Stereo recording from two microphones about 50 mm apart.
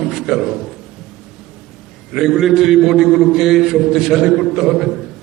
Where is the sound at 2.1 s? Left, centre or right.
Centre.